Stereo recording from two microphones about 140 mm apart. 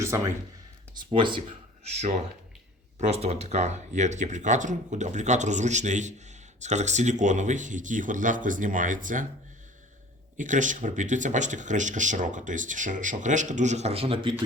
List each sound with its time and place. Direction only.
0.0 s speech: 20° right (ahead or behind)
1.1 s speech: 35° right (ahead or behind)
1.4 s speech: 55° right (ahead or behind)
10.3 s speech: 65° right (ahead or behind); by 14.3 s 40° right (ahead or behind)